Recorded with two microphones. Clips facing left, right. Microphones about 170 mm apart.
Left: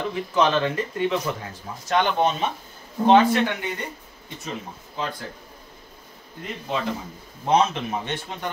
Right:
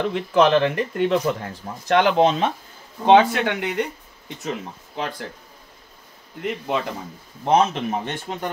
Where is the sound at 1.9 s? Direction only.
80° right.